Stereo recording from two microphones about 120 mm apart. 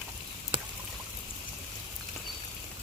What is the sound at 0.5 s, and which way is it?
Pour, 45° right (ahead or behind).